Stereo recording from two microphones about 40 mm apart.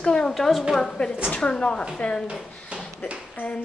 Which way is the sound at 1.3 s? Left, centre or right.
Left.